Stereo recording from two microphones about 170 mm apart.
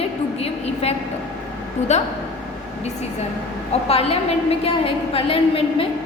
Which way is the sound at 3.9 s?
35° left (ahead or behind).